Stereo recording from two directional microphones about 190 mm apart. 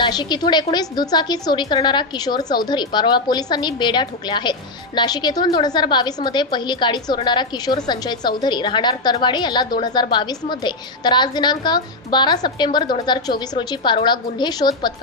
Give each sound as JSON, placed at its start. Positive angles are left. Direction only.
{"t": 0.0, "sound": "a woman's voice", "side_deg": 20}